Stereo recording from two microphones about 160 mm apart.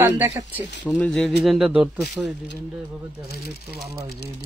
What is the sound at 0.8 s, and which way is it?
Speech, 5° left (ahead or behind).